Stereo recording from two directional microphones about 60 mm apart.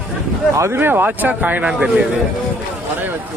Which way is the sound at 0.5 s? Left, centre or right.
Right.